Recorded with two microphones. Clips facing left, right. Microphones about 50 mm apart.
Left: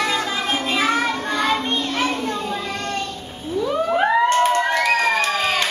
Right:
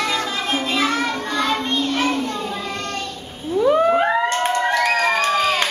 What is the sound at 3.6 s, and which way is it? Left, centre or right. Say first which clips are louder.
Whale vocalization: right 6 dB; right.